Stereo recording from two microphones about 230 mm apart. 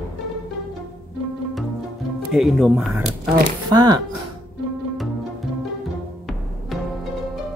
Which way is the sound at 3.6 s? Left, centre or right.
Centre.